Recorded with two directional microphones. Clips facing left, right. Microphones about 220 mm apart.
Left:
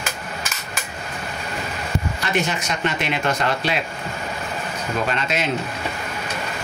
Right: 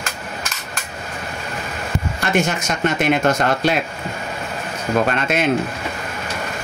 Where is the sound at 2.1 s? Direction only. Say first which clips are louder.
Right 6 dB; 45° right (ahead or behind).